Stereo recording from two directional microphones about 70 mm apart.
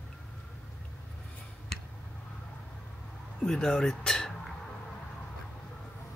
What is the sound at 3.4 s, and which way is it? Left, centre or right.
Speech, centre.